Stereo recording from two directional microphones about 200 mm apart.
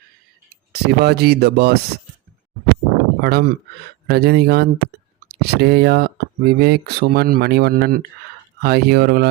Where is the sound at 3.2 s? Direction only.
55° right (ahead or behind).